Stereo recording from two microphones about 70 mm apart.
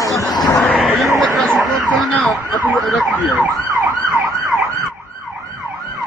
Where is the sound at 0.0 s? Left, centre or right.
Left.